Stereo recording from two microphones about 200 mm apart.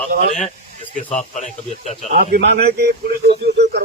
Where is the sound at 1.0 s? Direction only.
35° left (ahead or behind).